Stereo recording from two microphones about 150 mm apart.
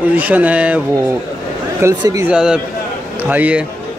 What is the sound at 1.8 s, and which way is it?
Speech, 20° right (ahead or behind).